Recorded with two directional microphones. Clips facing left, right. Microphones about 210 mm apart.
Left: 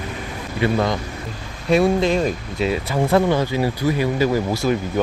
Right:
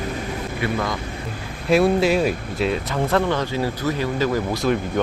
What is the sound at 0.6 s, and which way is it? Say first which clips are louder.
Speech: left 6 dB; 25° left (ahead or behind).